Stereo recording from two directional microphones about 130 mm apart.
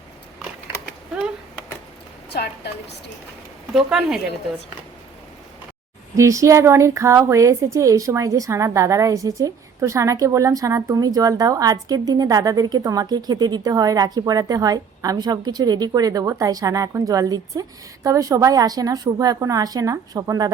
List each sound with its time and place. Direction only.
3.7 s speech: 5° right (ahead or behind)
6.1 s speech: 25° right (ahead or behind)